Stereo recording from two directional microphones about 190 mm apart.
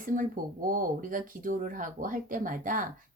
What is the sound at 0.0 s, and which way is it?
Speech, 45° right (ahead or behind).